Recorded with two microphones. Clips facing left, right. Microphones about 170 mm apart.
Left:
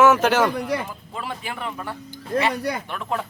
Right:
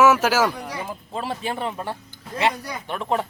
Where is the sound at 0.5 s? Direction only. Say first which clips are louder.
Left 7 dB; 65° left (ahead or behind).